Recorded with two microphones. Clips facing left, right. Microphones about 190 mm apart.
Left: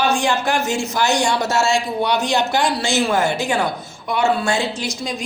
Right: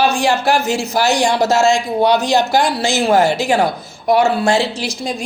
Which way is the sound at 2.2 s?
40° right (ahead or behind).